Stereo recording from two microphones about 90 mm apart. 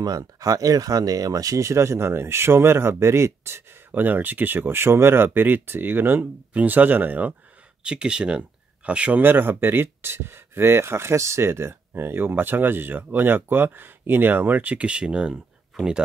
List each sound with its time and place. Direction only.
0.0 s speech: 40° right (ahead or behind); by 15.3 s 10° right (ahead or behind)